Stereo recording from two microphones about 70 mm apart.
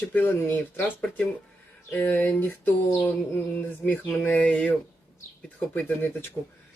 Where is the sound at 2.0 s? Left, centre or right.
Left.